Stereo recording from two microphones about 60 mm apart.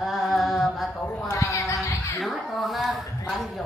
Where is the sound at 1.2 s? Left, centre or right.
Left.